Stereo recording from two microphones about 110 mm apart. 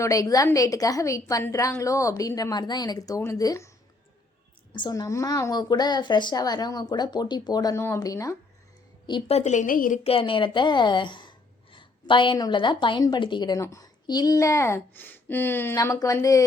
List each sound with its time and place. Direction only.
0.0 s a woman's voice: 30° left (ahead or behind)
4.7 s a woman's voice: 40° left (ahead or behind)
9.2 s a woman's voice: 80° left
10.0 s a woman's voice: 60° left (ahead or behind)
13.6 s speech: 30° left (ahead or behind)
15.7 s a woman's voice: 30° left (ahead or behind)